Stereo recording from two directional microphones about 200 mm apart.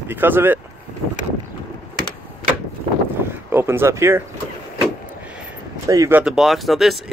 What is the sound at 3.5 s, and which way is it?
Speech, 10° right (ahead or behind).